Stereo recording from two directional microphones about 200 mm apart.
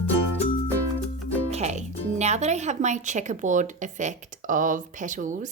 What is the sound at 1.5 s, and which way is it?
Music, 35° right (ahead or behind).